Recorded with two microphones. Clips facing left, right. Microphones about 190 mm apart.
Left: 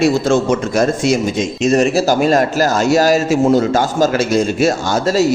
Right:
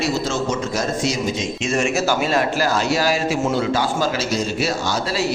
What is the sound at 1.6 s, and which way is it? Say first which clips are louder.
A man's voice: left 8 dB; 40° left (ahead or behind).